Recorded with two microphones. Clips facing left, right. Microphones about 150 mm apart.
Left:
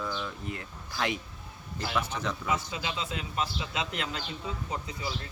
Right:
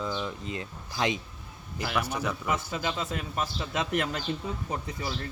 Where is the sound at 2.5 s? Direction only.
50° right (ahead or behind).